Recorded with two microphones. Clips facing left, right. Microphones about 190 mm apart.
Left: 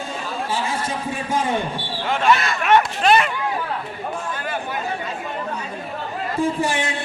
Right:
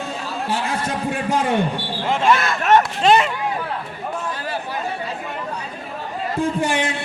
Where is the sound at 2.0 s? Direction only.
25° right (ahead or behind).